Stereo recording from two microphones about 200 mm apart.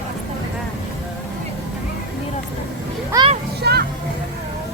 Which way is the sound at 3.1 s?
20° right (ahead or behind).